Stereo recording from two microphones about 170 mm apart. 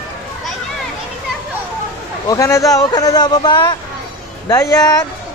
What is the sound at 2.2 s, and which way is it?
Speech, 20° left (ahead or behind).